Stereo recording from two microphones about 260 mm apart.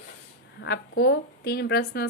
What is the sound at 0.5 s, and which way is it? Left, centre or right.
A woman's voice, left.